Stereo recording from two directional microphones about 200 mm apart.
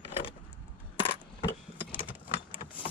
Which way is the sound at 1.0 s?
25° left (ahead or behind).